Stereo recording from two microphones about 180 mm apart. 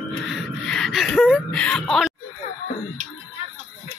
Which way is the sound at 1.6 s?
5° left (ahead or behind).